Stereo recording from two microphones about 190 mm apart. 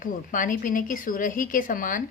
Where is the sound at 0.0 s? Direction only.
45° left (ahead or behind).